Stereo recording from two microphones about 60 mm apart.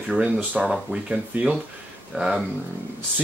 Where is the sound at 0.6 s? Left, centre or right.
Centre.